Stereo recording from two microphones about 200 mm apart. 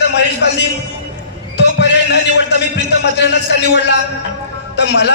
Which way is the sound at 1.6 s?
60° left (ahead or behind).